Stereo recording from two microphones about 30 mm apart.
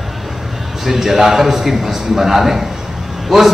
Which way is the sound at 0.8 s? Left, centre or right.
Centre.